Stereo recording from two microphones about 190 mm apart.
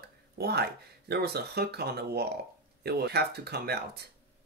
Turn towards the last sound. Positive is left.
turn(degrees=-60)  # may be behind; listen again after turning